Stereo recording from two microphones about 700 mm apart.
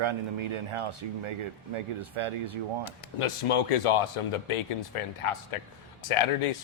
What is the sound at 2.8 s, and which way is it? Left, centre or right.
A man's voice, left.